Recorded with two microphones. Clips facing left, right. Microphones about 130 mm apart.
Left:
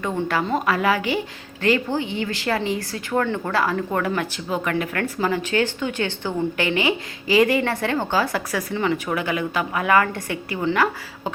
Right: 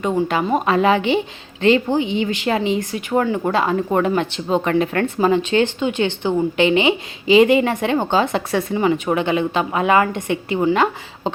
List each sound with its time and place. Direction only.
0.3 s speech: 20° right (ahead or behind)